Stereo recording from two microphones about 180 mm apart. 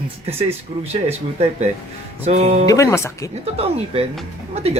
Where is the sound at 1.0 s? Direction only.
35° right (ahead or behind).